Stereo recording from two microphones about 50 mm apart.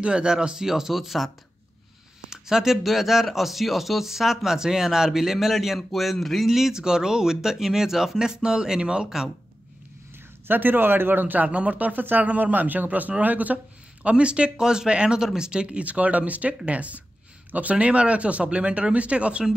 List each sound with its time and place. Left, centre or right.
0.0 s speech: centre
10.4 s a man's voice: right
14.0 s speech: right